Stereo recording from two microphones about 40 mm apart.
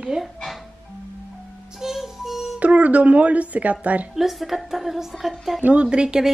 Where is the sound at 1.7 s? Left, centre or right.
Centre.